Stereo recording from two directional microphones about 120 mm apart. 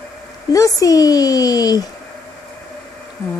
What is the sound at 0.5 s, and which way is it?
A woman's voice, 30° left (ahead or behind).